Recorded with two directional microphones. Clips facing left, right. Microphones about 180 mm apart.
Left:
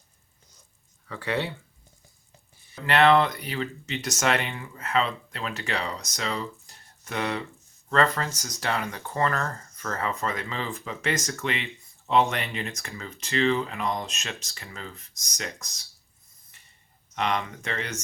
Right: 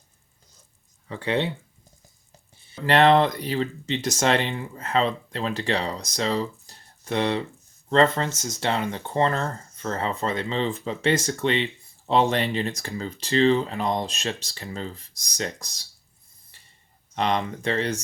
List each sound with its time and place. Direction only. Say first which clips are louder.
1.0 s speech: right 4 dB; 20° right (ahead or behind)
2.8 s speech: right 2 dB; 35° right (ahead or behind)
17.2 s speech: right 3 dB; 35° right (ahead or behind)